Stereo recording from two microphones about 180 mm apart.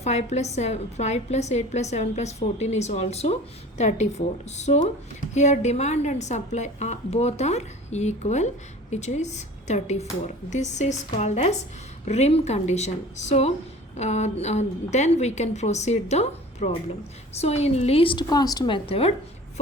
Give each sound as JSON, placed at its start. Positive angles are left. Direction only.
{"t": 0.0, "sound": "a woman's voice", "side_deg": 40}